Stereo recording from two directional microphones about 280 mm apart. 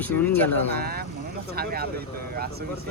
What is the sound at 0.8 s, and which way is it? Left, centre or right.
Speech, right.